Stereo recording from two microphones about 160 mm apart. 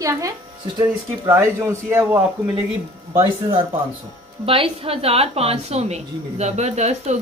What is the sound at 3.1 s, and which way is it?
A woman's voice, 30° right (ahead or behind).